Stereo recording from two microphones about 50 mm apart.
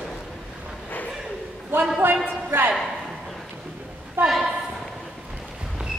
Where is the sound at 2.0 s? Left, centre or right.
Right.